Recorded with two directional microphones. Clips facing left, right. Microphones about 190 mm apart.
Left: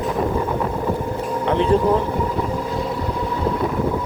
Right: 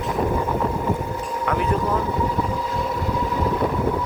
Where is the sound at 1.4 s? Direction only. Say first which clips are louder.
Left 6 dB; 30° left (ahead or behind).